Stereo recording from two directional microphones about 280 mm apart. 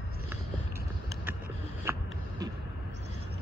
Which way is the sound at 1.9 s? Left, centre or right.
Centre.